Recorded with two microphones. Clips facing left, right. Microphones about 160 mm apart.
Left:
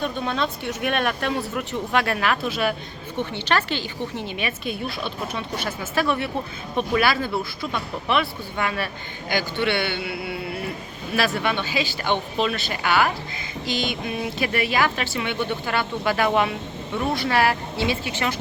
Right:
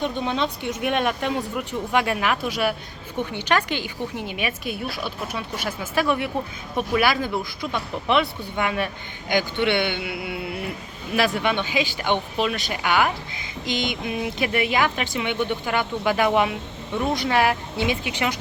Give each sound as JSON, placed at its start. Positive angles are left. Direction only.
{"t": 0.0, "sound": "a man's voice", "side_deg": -20}